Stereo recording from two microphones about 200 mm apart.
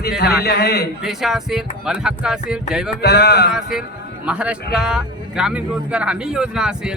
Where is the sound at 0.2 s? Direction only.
55° left (ahead or behind).